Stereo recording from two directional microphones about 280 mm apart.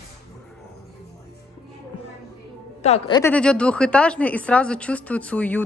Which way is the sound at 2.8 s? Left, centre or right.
Left.